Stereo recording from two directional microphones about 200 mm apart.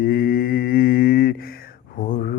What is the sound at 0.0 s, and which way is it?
Mantra, 45° left (ahead or behind).